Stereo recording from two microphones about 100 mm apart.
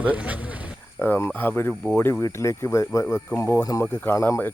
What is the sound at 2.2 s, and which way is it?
Speech, 30° left (ahead or behind).